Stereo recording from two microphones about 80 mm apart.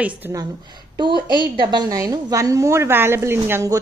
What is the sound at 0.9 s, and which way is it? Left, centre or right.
Speech, right.